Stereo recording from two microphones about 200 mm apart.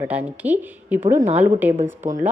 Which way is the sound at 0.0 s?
10° right (ahead or behind).